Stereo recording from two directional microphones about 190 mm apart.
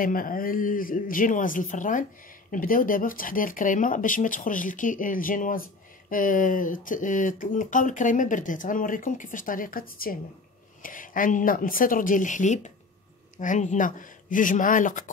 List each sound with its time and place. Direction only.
0.0 s speech: 45° left (ahead or behind)